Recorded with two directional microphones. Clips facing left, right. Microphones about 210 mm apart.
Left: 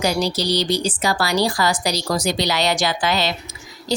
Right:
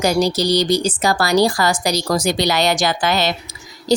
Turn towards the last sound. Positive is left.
turn(degrees=-50)  # may be behind; listen again after turning